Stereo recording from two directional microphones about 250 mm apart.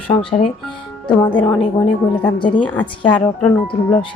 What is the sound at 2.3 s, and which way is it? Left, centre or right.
Music, centre.